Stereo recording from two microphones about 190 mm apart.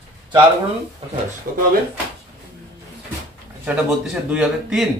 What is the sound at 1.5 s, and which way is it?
Speech, 50° right (ahead or behind).